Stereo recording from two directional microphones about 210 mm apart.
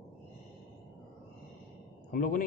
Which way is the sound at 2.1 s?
40° left (ahead or behind).